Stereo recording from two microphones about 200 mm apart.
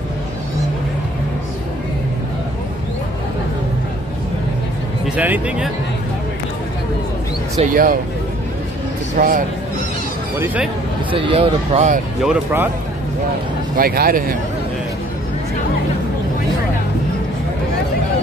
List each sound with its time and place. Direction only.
5.0 s speech: 5° right (ahead or behind)
7.7 s speech: 45° right (ahead or behind)
9.1 s speech: 40° right (ahead or behind)
10.4 s speech: 10° right (ahead or behind)
11.1 s speech: 25° right (ahead or behind)
12.2 s speech: 5° right (ahead or behind)
13.7 s speech: 50° right (ahead or behind)